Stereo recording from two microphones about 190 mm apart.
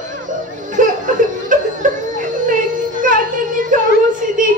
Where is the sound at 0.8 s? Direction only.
45° right (ahead or behind).